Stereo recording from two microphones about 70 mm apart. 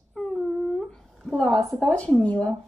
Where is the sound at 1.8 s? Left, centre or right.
Centre.